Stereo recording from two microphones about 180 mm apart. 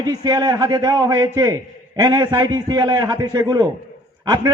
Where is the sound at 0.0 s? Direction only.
20° right (ahead or behind).